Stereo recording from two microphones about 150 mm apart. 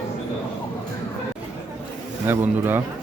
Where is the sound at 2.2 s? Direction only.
15° right (ahead or behind).